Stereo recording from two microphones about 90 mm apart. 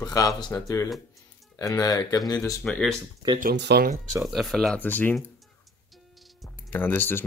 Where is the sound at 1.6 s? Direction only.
40° left (ahead or behind).